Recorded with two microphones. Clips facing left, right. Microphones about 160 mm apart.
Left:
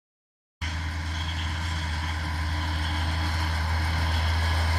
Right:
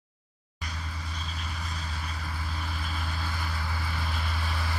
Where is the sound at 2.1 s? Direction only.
70° left (ahead or behind).